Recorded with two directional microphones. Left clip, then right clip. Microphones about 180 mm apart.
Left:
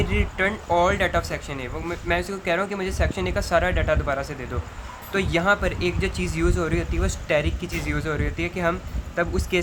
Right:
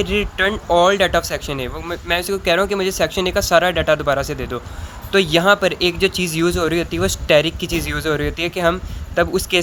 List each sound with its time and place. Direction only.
0.0 s speech: 40° right (ahead or behind)